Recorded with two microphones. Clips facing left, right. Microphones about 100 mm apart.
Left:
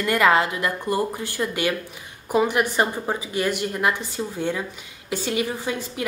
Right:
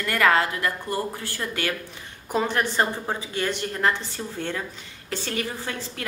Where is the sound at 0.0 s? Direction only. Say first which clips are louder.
Left 2 dB; 20° left (ahead or behind).